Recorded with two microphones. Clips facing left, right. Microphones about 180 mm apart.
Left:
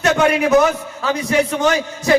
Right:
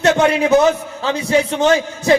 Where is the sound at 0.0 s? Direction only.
25° right (ahead or behind).